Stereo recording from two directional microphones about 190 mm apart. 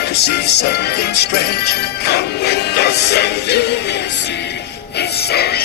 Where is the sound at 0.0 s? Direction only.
60° left (ahead or behind).